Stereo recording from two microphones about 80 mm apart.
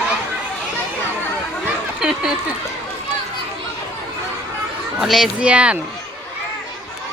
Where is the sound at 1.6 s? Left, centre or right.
Centre.